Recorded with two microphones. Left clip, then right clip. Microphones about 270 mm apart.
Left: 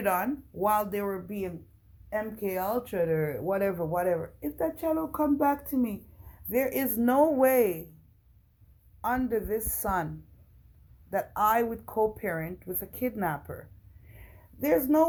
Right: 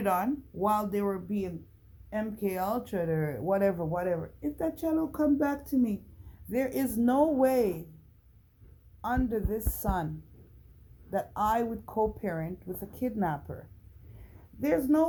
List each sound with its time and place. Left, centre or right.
0.0 s speech: centre
9.0 s speech: centre
11.1 s speech: centre